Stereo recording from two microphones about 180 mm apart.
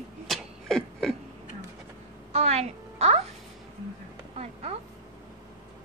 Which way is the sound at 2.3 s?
35° right (ahead or behind).